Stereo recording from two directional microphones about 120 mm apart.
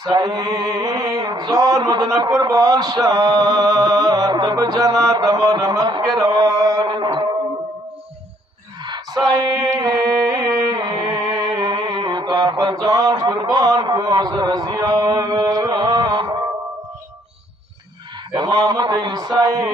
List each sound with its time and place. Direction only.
0.1 s a man's voice: 30° right (ahead or behind)
8.8 s singing: 35° right (ahead or behind)
18.3 s a man's voice: 35° right (ahead or behind)